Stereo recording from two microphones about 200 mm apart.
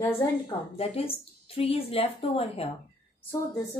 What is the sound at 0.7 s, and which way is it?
A woman's voice, 30° left (ahead or behind).